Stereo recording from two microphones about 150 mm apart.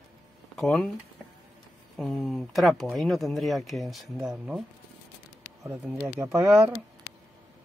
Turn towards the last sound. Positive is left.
turn(degrees=-20)  # may be behind; listen again after turning